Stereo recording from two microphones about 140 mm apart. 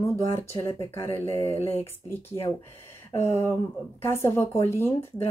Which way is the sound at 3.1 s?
20° left (ahead or behind).